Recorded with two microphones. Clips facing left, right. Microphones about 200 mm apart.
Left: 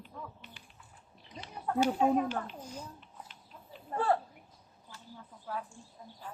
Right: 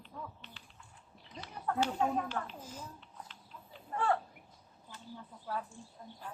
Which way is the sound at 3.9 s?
35° left (ahead or behind).